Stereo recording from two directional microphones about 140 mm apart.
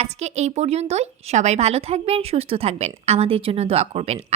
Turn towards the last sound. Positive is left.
turn(degrees=-50)  # may be behind; listen again after turning